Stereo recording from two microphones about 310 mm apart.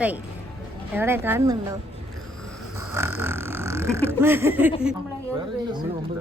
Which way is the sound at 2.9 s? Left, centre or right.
Centre.